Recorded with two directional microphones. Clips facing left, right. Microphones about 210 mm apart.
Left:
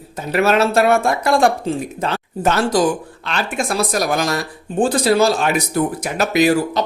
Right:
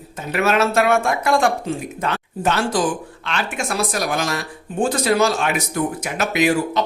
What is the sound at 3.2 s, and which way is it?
Speech, 35° left (ahead or behind).